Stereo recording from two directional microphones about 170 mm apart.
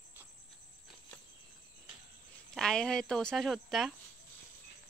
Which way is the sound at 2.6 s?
5° left (ahead or behind).